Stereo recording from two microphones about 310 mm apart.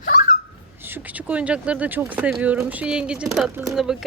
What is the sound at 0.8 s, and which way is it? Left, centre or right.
Speech, centre.